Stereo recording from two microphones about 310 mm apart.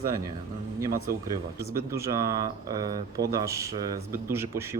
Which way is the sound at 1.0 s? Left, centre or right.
Centre.